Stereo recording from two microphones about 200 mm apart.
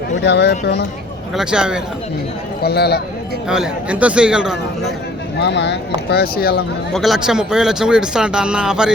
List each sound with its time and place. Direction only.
0.2 s speech: 60° left (ahead or behind)
1.4 s speech: 5° right (ahead or behind)
2.6 s speech: 55° left (ahead or behind)
3.5 s speech: 5° right (ahead or behind)
5.4 s speech: 60° left (ahead or behind)
6.9 s speech: centre (ahead or behind)